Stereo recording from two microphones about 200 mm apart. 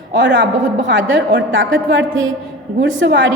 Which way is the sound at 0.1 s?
60° right (ahead or behind).